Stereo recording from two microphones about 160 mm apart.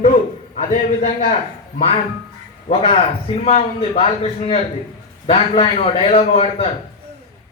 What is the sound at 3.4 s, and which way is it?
A man's voice, 40° left (ahead or behind).